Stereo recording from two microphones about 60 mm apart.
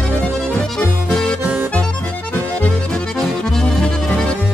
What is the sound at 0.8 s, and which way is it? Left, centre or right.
Music, centre.